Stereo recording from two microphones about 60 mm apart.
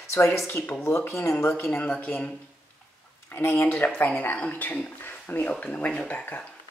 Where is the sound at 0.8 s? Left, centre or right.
Left.